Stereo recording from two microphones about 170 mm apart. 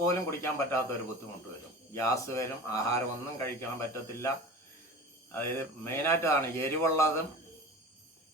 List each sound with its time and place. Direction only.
0.0 s speech: 15° left (ahead or behind)
5.3 s speech: 15° left (ahead or behind)